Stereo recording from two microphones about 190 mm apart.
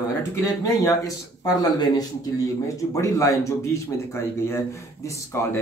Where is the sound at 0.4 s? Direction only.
20° left (ahead or behind).